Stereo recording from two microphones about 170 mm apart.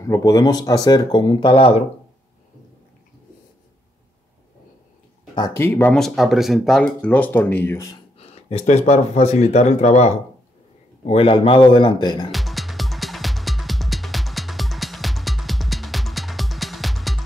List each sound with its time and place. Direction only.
0.0 s speech: 20° left (ahead or behind); by 1.9 s 35° left (ahead or behind)
5.3 s speech: 20° left (ahead or behind)
8.2 s speech: 40° left (ahead or behind)
12.3 s music: centre (ahead or behind)